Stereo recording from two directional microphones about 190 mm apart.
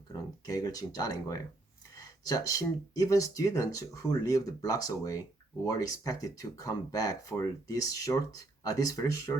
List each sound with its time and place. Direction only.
0.1 s speech: 20° left (ahead or behind)